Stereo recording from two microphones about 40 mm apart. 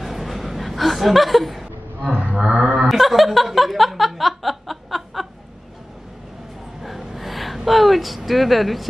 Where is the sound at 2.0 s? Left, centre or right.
Right.